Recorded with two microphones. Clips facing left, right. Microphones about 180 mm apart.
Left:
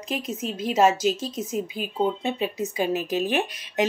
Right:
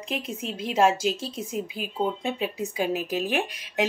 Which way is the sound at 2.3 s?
10° right (ahead or behind).